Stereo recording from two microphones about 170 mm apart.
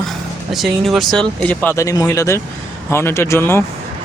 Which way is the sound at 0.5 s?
Centre (ahead or behind).